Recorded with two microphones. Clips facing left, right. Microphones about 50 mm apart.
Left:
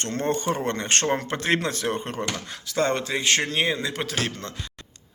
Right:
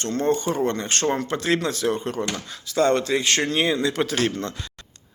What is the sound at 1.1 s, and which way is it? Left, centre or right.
A man's voice, left.